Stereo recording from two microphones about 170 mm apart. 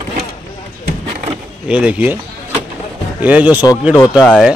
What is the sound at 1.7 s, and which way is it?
Speech, 5° right (ahead or behind).